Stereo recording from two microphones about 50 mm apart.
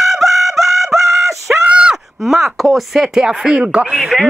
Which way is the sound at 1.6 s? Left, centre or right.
Centre.